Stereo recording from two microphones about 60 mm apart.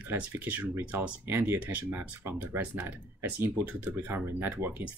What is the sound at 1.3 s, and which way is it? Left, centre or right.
Speech, right.